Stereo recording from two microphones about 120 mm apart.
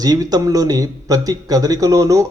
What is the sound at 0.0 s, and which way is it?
Speech, 30° right (ahead or behind).